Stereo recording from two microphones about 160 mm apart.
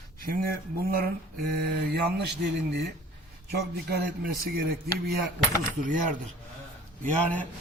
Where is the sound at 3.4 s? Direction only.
80° right.